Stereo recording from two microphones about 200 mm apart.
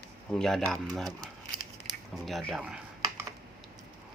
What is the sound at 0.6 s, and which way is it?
Speech, 15° right (ahead or behind).